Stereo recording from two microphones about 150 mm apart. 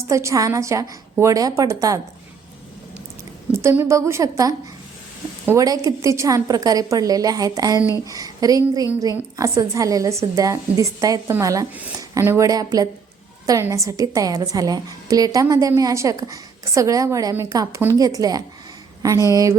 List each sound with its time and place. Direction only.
0.1 s a woman's voice: 20° right (ahead or behind)
3.5 s a woman's voice: 15° right (ahead or behind)